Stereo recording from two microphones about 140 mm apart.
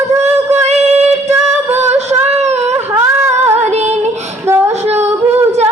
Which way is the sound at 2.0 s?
55° right (ahead or behind).